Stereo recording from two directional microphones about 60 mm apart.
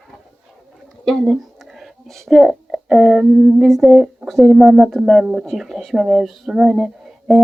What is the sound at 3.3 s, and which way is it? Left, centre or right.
Humming, centre.